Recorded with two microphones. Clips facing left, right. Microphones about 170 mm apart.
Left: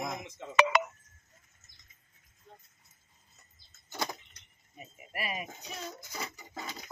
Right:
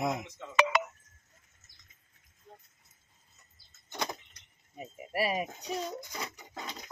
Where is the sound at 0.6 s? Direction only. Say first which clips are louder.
Left 1 dB; 60° left (ahead or behind).